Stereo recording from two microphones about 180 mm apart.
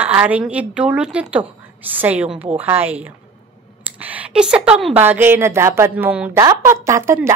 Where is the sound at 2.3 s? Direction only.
30° right (ahead or behind).